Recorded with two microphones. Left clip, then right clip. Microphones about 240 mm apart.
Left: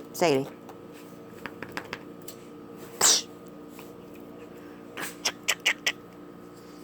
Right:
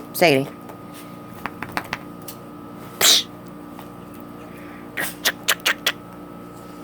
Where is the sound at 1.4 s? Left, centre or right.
Centre.